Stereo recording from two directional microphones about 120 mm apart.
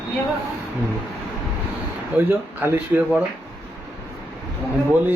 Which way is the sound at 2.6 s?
15° right (ahead or behind).